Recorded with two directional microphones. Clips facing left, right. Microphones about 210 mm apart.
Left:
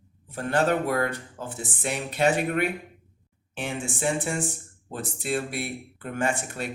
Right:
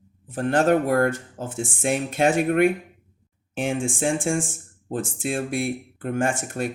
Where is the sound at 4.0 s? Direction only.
50° right (ahead or behind).